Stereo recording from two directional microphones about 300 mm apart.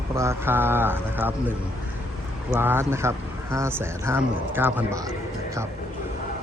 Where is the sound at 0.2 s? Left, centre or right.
Centre.